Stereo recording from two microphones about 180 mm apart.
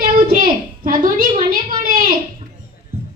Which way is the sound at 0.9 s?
50° right (ahead or behind).